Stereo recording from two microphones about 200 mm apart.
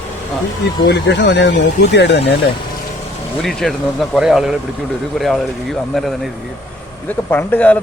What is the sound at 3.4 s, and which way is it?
A man's voice, centre (ahead or behind).